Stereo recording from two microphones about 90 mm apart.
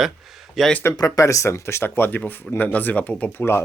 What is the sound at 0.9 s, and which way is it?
Speech, 40° left (ahead or behind).